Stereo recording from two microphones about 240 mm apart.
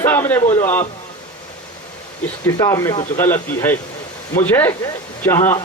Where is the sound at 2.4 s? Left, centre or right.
Centre.